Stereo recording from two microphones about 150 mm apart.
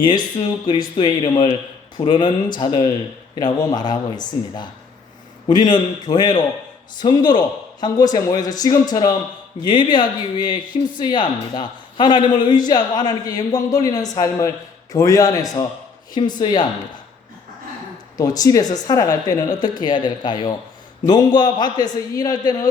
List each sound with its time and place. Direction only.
0.7 s speech: 30° left (ahead or behind)
18.2 s speech: 25° left (ahead or behind)